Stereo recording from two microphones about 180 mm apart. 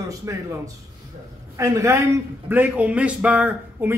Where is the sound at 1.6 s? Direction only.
15° right (ahead or behind).